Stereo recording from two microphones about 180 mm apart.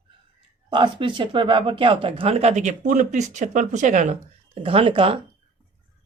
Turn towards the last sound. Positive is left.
turn(degrees=-30)  # may be behind; listen again after turning